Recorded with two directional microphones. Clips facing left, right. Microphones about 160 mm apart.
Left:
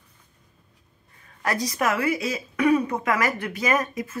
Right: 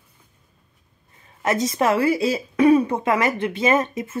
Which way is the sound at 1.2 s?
20° right (ahead or behind).